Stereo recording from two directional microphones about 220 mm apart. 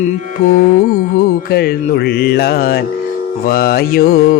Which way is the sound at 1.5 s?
45° left (ahead or behind).